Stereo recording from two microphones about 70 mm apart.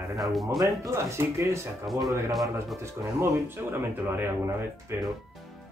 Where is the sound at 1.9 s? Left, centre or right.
Centre.